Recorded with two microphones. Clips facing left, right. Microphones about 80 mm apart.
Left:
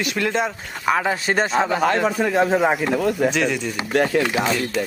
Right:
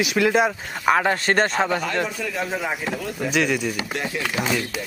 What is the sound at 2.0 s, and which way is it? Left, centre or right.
Speech, left.